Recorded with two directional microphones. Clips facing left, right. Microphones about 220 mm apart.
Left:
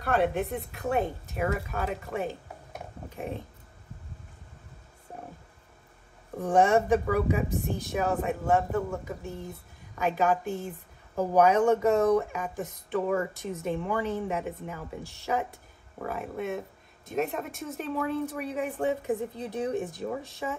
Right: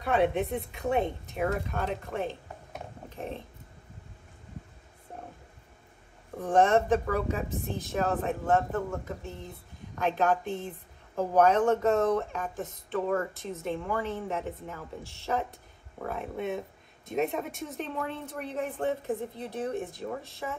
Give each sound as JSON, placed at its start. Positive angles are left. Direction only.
{"t": 0.0, "sound": "speech", "side_deg": 0}
{"t": 6.4, "sound": "speech", "side_deg": 15}